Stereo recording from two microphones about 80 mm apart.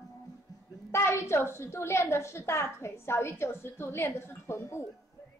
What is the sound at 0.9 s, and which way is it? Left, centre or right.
A woman's voice, left.